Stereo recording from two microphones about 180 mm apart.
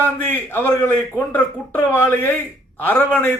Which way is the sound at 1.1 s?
10° left (ahead or behind).